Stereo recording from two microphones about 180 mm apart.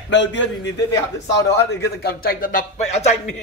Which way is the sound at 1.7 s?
65° left (ahead or behind).